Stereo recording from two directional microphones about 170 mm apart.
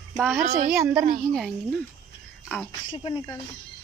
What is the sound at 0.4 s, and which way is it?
Speech, 55° right (ahead or behind).